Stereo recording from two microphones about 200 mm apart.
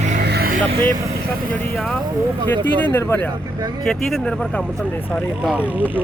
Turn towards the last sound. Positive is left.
turn(degrees=-10)  # may be behind; listen again after turning